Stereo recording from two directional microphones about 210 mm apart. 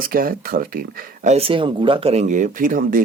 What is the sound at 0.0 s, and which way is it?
Speech, 45° right (ahead or behind).